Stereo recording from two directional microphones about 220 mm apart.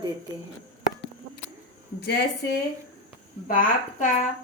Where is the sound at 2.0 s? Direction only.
50° left (ahead or behind).